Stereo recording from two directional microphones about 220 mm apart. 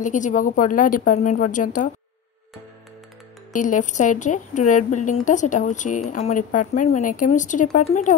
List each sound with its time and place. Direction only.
0.0 s speech: 35° left (ahead or behind)
3.5 s speech: 35° left (ahead or behind)